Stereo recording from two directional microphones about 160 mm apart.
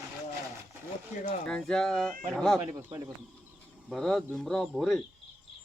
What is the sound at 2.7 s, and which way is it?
Speech, 25° right (ahead or behind).